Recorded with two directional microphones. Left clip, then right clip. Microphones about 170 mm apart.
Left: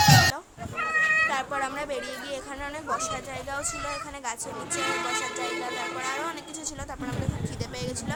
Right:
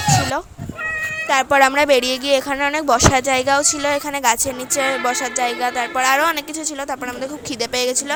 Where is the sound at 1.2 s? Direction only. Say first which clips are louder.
Right 13 dB; 40° right (ahead or behind).